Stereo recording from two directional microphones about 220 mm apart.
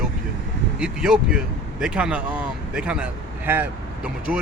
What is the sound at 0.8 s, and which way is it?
Speech, 5° right (ahead or behind).